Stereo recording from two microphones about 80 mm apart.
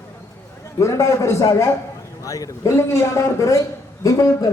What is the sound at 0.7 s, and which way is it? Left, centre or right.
A man's voice, left.